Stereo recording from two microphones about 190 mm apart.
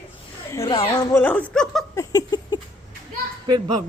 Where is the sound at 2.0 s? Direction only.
20° left (ahead or behind).